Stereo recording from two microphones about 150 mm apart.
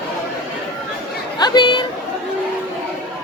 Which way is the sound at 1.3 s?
30° left (ahead or behind).